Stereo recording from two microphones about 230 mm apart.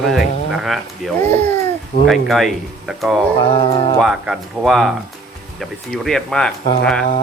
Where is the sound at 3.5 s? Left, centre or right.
Left.